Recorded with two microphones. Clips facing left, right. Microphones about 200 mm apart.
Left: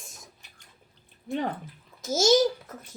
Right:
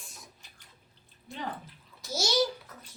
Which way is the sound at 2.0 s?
45° left (ahead or behind).